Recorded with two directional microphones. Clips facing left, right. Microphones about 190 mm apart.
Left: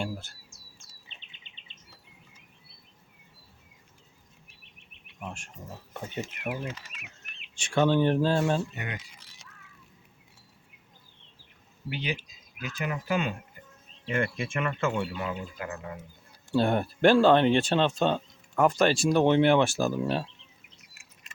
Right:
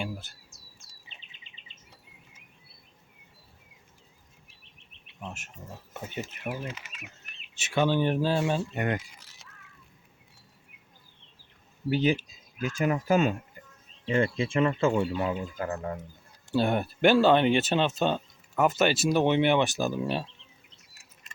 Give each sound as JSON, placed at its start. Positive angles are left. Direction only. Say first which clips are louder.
{"t": 0.0, "sound": "chirp", "louder": "left 1 dB", "side_deg": 0}
{"t": 5.9, "sound": "speech", "louder": "left 1 dB", "side_deg": -5}
{"t": 7.5, "sound": "speech", "louder": "left 2 dB", "side_deg": -5}
{"t": 8.7, "sound": "speech", "louder": "right 9 dB", "side_deg": -55}
{"t": 11.9, "sound": "speech", "louder": "right 9 dB", "side_deg": -45}
{"t": 14.0, "sound": "speech", "louder": "right 4 dB", "side_deg": -30}
{"t": 16.6, "sound": "speech", "louder": "left 1 dB", "side_deg": -5}